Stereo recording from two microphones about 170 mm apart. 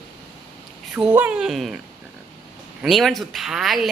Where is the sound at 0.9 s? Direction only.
10° right (ahead or behind).